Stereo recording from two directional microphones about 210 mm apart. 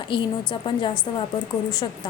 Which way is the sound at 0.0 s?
25° left (ahead or behind).